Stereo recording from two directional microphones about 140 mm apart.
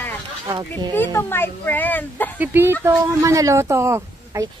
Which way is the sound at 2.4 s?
15° right (ahead or behind).